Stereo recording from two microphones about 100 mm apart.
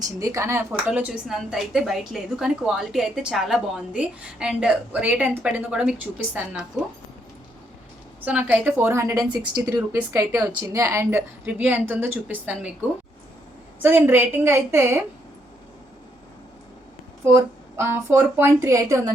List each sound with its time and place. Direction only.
0.0 s a woman's voice: 35° right (ahead or behind)
0.9 s a woman's voice: 10° right (ahead or behind)
8.2 s a woman's voice: 15° right (ahead or behind)
11.4 s a woman's voice: 15° right (ahead or behind)
13.8 s speech: 20° right (ahead or behind)
17.2 s speech: 25° right (ahead or behind)